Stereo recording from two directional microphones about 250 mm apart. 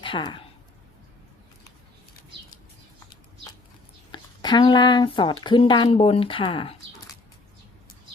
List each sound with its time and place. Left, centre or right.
0.0 s speech: centre
4.1 s speech: centre